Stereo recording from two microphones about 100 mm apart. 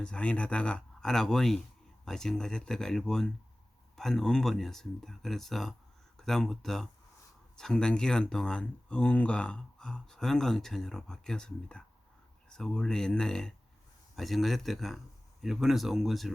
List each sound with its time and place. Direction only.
0.0 s speech: 10° left (ahead or behind)